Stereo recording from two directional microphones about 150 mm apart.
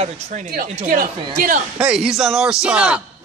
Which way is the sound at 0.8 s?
70° right (ahead or behind).